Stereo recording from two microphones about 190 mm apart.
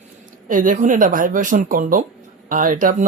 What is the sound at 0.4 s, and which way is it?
Speech, 45° right (ahead or behind).